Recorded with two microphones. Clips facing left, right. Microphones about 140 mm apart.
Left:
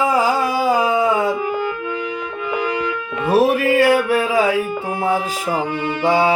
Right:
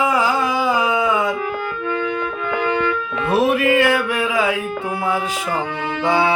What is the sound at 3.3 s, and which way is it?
Music, 40° left (ahead or behind).